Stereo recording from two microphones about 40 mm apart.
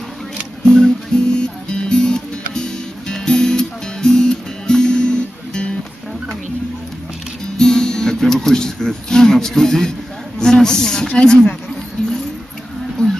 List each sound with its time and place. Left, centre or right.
0.7 s music: centre
7.5 s music: centre
10.4 s speech: centre
12.0 s a sound: left